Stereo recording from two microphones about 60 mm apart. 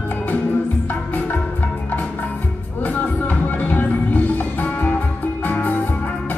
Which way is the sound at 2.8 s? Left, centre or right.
Left.